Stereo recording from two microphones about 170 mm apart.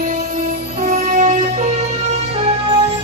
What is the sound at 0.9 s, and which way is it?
Music, 45° right (ahead or behind).